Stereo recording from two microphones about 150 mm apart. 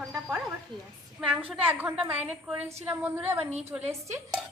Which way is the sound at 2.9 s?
15° right (ahead or behind).